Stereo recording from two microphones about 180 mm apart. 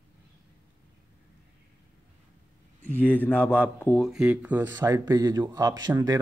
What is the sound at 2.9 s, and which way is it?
Speech, 10° left (ahead or behind).